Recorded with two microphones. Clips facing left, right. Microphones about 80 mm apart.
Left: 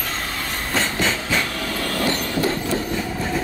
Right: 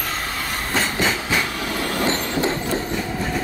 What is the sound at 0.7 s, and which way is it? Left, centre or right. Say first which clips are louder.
Train: even; centre.